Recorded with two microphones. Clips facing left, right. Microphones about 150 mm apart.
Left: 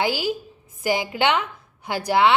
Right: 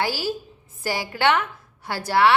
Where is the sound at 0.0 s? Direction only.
20° left (ahead or behind).